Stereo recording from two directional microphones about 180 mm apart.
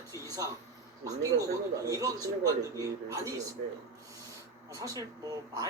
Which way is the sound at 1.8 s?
20° right (ahead or behind).